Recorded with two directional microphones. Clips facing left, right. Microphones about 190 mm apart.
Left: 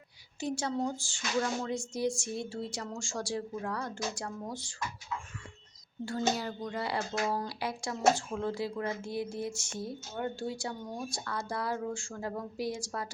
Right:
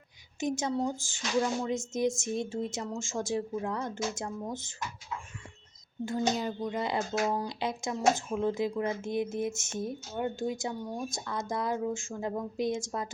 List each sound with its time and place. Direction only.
0.3 s speech: 20° right (ahead or behind)
6.1 s speech: 20° right (ahead or behind)